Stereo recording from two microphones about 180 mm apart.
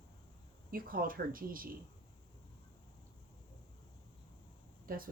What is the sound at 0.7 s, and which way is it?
Speech, 55° right (ahead or behind).